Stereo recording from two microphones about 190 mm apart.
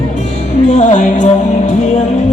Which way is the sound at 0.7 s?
40° left (ahead or behind).